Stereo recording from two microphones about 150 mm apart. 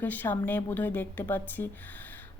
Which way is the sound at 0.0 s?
10° left (ahead or behind).